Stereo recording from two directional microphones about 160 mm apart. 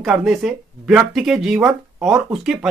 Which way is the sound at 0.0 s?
Centre (ahead or behind).